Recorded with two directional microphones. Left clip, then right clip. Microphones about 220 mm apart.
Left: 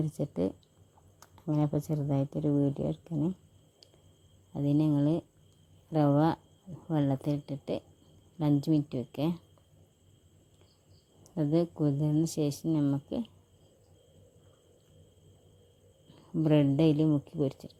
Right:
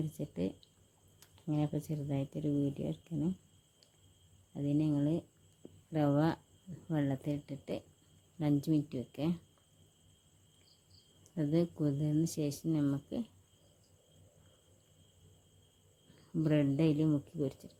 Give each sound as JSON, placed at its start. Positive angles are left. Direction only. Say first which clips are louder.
{"t": 0.0, "sound": "speech", "louder": "left 7 dB", "side_deg": 20}
{"t": 4.5, "sound": "speech", "louder": "left 5 dB", "side_deg": 25}
{"t": 11.2, "sound": "speech", "louder": "left 5 dB", "side_deg": 20}
{"t": 16.4, "sound": "speech", "louder": "left 6 dB", "side_deg": 20}